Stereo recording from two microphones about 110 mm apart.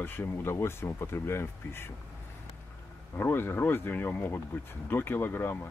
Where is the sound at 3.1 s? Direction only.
20° left (ahead or behind).